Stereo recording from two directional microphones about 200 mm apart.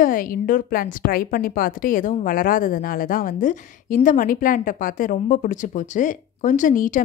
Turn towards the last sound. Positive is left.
turn(degrees=40)  # may be behind; listen again after turning